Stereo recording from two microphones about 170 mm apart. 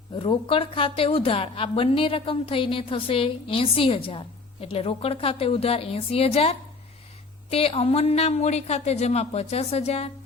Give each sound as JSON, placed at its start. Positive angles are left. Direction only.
{"t": 0.2, "sound": "a woman's voice", "side_deg": 30}